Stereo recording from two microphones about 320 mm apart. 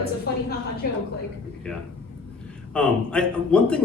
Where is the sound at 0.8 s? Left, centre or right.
Left.